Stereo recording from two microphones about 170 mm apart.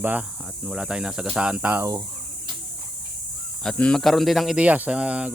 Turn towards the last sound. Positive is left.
turn(degrees=-5)  # may be behind; listen again after turning